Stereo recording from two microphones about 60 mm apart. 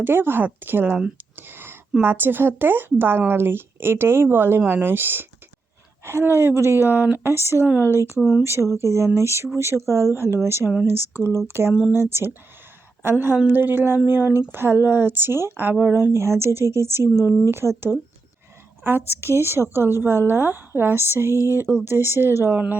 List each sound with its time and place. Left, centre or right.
0.0 s speech: right
1.4 s a sound: right
2.0 s speech: right
8.4 s speech: right
11.4 s a woman's voice: right
17.6 s speech: centre
18.8 s speech: right